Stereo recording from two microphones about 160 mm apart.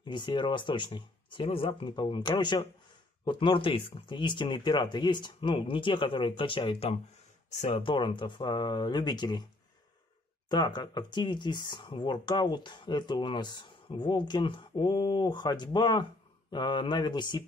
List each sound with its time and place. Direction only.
0.0 s speech: 30° left (ahead or behind)
10.5 s speech: 25° left (ahead or behind)